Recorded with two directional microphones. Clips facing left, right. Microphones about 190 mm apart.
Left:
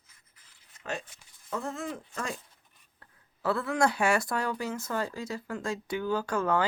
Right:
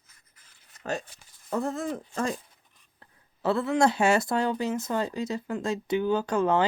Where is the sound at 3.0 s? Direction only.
25° right (ahead or behind).